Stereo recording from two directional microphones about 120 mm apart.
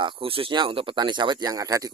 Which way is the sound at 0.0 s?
45° right (ahead or behind).